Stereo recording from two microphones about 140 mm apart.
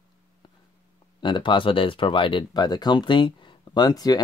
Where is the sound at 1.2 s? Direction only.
35° left (ahead or behind).